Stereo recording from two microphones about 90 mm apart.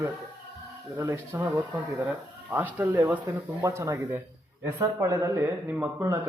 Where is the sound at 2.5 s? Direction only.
25° right (ahead or behind).